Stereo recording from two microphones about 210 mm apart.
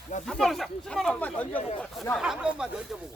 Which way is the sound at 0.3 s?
Centre (ahead or behind).